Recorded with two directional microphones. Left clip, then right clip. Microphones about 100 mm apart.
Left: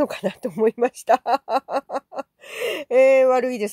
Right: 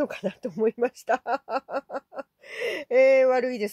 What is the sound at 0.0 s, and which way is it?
Speech, 35° left (ahead or behind).